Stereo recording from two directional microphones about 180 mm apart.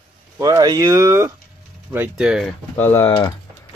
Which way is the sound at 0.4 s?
20° right (ahead or behind).